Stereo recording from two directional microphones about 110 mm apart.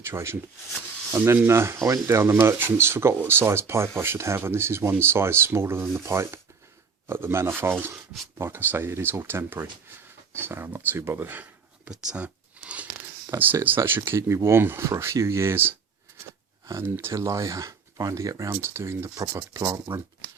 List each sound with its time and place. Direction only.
0.0 s speech: 25° right (ahead or behind)
11.9 s zipper: 10° right (ahead or behind)
13.3 s speech: 20° right (ahead or behind)
19.2 s speech: 35° right (ahead or behind)